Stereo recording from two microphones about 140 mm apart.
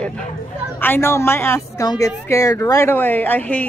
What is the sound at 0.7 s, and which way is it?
A woman's voice, 15° left (ahead or behind).